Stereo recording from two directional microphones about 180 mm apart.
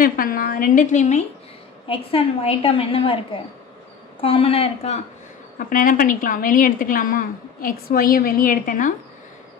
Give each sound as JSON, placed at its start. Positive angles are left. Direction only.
{"t": 0.0, "sound": "a woman's voice", "side_deg": 50}
{"t": 1.9, "sound": "a woman's voice", "side_deg": 30}
{"t": 4.2, "sound": "a woman's voice", "side_deg": 30}
{"t": 5.6, "sound": "a woman's voice", "side_deg": 50}